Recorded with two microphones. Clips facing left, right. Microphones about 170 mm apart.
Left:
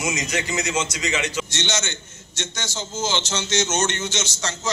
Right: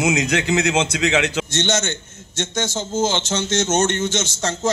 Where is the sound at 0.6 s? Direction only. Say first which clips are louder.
Right 6 dB; 60° right (ahead or behind).